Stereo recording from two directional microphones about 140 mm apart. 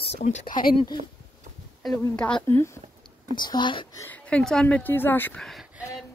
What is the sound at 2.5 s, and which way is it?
Speech, 20° left (ahead or behind).